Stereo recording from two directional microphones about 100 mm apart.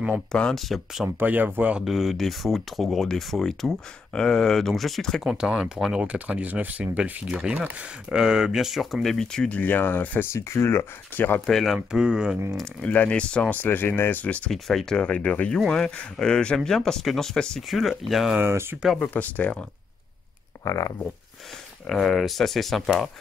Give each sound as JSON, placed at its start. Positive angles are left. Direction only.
{"t": 0.3, "sound": "speech", "side_deg": 5}
{"t": 1.0, "sound": "speech", "side_deg": -15}
{"t": 11.4, "sound": "speech", "side_deg": 0}
{"t": 12.8, "sound": "speech", "side_deg": 15}
{"t": 14.5, "sound": "speech", "side_deg": 5}
{"t": 18.3, "sound": "speech", "side_deg": -25}
{"t": 18.9, "sound": "speech", "side_deg": 15}
{"t": 20.6, "sound": "speech", "side_deg": 30}
{"t": 21.8, "sound": "speech", "side_deg": 0}